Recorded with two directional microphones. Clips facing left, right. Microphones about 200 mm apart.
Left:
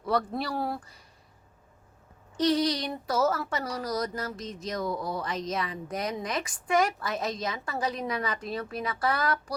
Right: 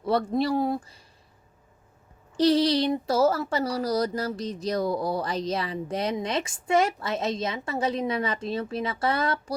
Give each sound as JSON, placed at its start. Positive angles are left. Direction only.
{"t": 0.0, "sound": "a woman's voice", "side_deg": -25}
{"t": 2.3, "sound": "a woman's voice", "side_deg": -30}